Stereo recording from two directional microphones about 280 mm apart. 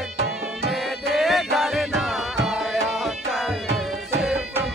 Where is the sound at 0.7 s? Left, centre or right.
Centre.